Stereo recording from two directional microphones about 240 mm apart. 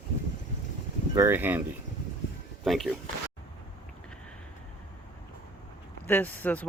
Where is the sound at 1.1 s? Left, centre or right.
Centre.